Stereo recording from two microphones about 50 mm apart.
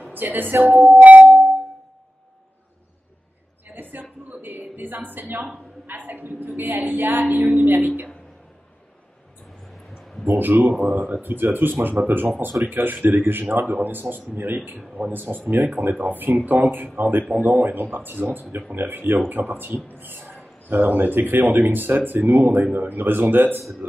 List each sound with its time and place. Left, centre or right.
0.1 s speech: right
3.7 s a sound: right
5.9 s speech: right
9.8 s a sound: centre
10.2 s speech: right
10.7 s speech: centre
11.2 s speech: right
20.0 s a sound: right
20.7 s speech: right
23.6 s speech: centre